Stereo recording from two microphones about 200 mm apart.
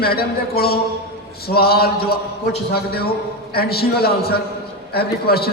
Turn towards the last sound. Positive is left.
turn(degrees=50)  # may be behind; listen again after turning